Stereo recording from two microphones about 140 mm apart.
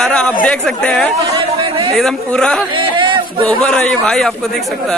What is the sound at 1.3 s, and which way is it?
Chatter, 35° right (ahead or behind).